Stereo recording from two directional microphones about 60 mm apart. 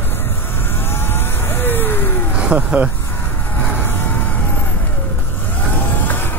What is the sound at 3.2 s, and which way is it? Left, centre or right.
Vehicle, left.